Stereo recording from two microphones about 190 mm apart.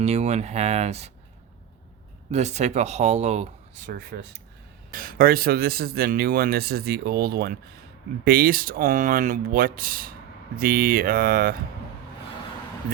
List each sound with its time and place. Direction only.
0.0 s speech: 35° right (ahead or behind)
2.3 s speech: 35° right (ahead or behind)